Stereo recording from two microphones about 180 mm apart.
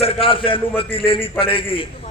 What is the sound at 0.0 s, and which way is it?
A man's voice, 30° left (ahead or behind).